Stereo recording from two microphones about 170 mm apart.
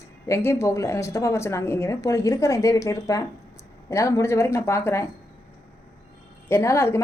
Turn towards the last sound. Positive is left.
turn(degrees=15)  # may be behind; listen again after turning